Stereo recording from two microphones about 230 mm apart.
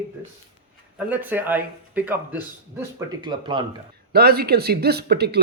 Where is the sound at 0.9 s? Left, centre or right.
Centre.